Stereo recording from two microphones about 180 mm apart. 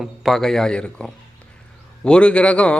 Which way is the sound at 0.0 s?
Centre (ahead or behind).